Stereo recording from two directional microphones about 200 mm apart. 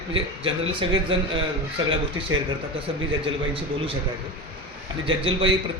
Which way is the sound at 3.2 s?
25° right (ahead or behind).